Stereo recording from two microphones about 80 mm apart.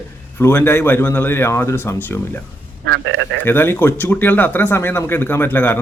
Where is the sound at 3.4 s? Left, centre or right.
Left.